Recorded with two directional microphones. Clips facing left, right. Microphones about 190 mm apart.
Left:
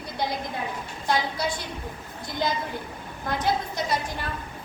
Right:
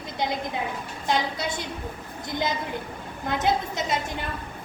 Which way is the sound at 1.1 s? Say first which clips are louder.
Even; 20° right (ahead or behind).